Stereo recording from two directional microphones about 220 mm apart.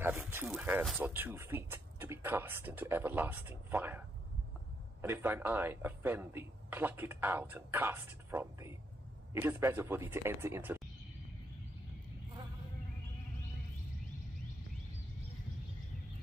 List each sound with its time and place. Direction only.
0.0 s speech: 10° right (ahead or behind)
5.0 s speech: 10° right (ahead or behind)